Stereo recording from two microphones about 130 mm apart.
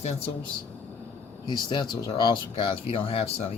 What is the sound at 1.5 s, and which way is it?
Speech, 35° left (ahead or behind).